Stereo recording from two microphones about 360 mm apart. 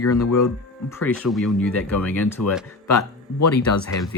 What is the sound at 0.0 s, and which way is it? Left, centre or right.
Speech, left.